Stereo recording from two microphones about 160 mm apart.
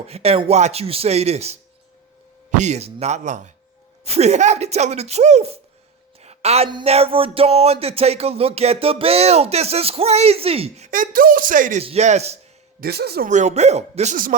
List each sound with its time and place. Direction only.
0.1 s music: 40° right (ahead or behind)
2.5 s speech: 50° right (ahead or behind)
6.1 s a sound: 40° right (ahead or behind)
6.7 s a sound: 30° right (ahead or behind)
6.9 s music: 35° right (ahead or behind); by 11.8 s 55° right (ahead or behind)
11.8 s music: 40° right (ahead or behind)
12.8 s speech: 85° right
13.2 s speech: 50° right (ahead or behind)